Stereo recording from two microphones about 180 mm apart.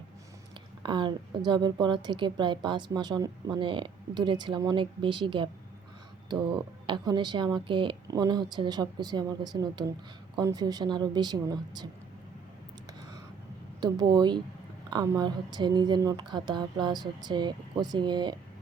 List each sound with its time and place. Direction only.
0.8 s a woman's voice: 25° right (ahead or behind)
6.8 s a woman's voice: 25° right (ahead or behind)
13.8 s a woman's voice: 25° right (ahead or behind)